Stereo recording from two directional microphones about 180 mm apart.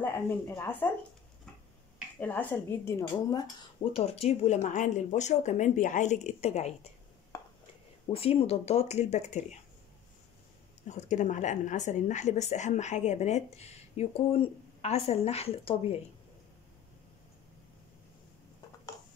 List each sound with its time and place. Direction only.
0.0 s speech: 10° left (ahead or behind)
2.1 s speech: 10° left (ahead or behind)
3.9 s a woman's voice: 35° left (ahead or behind)
7.3 s a sound: 15° left (ahead or behind)
8.1 s a woman's voice: 30° left (ahead or behind)
10.9 s a woman's voice: 45° left (ahead or behind)